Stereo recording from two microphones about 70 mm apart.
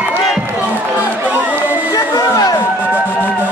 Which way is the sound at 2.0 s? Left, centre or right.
Left.